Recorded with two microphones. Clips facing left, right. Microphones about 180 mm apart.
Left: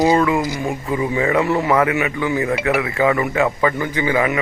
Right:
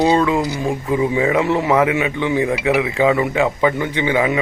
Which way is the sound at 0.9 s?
15° right (ahead or behind).